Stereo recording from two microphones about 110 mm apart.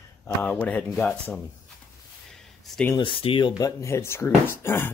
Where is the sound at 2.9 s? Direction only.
50° left (ahead or behind).